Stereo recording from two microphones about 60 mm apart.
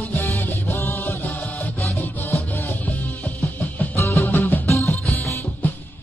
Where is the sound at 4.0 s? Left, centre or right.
Left.